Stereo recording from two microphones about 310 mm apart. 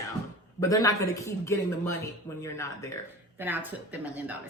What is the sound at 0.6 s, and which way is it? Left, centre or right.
A woman's voice, centre.